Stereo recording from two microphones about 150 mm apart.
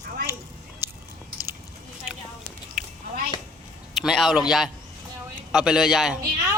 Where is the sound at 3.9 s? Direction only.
Centre (ahead or behind).